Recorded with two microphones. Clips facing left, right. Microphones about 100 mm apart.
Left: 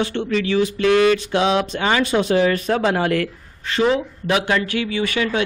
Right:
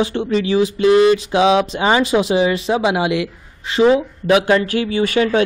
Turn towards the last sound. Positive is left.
turn(degrees=-35)  # may be behind; listen again after turning